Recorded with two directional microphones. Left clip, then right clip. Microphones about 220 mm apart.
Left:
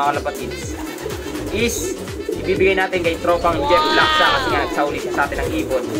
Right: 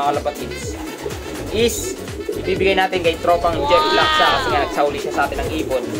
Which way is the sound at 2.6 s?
20° right (ahead or behind).